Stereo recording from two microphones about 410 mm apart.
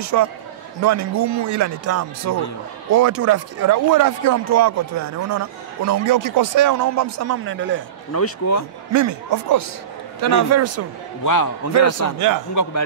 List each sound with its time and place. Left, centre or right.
0.0 s speech: right
8.1 s speech: left
8.9 s speech: right
11.2 s a man's voice: left
12.2 s speech: right